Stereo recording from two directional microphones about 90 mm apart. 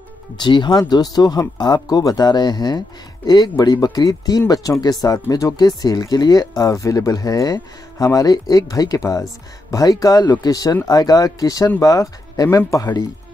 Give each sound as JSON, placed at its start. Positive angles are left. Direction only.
{"t": 0.4, "sound": "speech", "side_deg": 55}